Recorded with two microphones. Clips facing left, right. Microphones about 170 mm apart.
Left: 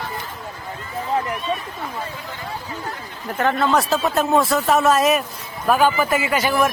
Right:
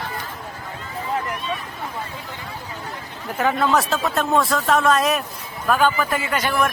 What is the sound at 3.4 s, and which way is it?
A man's voice, 5° right (ahead or behind).